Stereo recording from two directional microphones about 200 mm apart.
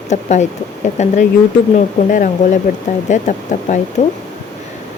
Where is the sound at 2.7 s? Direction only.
40° left (ahead or behind).